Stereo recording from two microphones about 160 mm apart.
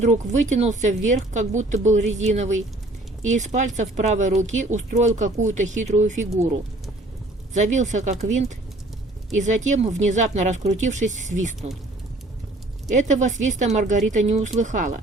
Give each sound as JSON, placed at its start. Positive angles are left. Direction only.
{"t": 0.0, "sound": "speech", "side_deg": -45}
{"t": 7.5, "sound": "speech", "side_deg": -50}
{"t": 12.9, "sound": "speech", "side_deg": -50}